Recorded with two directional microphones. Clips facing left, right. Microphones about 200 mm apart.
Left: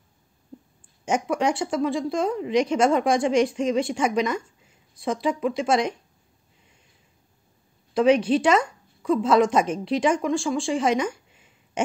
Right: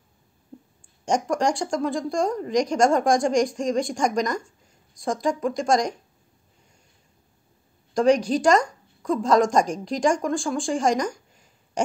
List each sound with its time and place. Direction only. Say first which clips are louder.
1.0 s a woman's voice: right 1 dB; 5° left (ahead or behind)
7.9 s a woman's voice: left 1 dB; 5° left (ahead or behind)